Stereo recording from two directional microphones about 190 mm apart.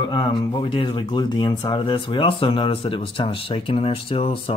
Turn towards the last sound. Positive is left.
turn(degrees=30)  # may be behind; listen again after turning